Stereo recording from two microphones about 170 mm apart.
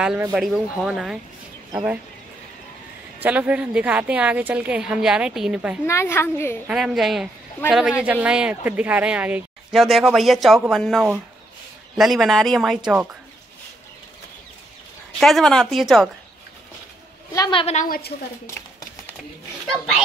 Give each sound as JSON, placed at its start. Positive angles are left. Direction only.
{"t": 0.0, "sound": "speech", "side_deg": -5}
{"t": 3.2, "sound": "a woman's voice", "side_deg": -10}
{"t": 5.9, "sound": "a woman's voice", "side_deg": 15}
{"t": 6.7, "sound": "speech", "side_deg": 0}
{"t": 15.1, "sound": "speech", "side_deg": 0}
{"t": 17.3, "sound": "a sound", "side_deg": 20}
{"t": 17.6, "sound": "a woman's voice", "side_deg": 40}
{"t": 17.8, "sound": "a woman's voice", "side_deg": 60}